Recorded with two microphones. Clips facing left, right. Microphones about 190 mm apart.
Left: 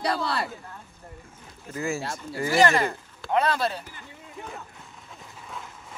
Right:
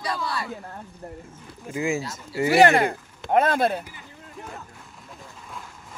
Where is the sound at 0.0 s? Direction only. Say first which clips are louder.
Left 2 dB; 65° left (ahead or behind).